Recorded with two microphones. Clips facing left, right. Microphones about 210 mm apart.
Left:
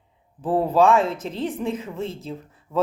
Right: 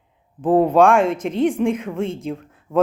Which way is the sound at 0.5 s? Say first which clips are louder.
Right 4 dB; 90° right.